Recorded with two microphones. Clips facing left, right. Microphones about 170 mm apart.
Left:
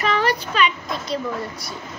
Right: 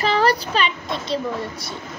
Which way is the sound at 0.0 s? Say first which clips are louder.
Right 2 dB; 35° right (ahead or behind).